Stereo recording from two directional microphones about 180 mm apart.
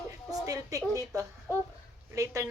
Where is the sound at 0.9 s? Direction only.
15° right (ahead or behind).